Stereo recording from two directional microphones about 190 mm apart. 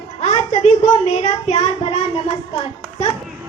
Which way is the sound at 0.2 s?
35° left (ahead or behind).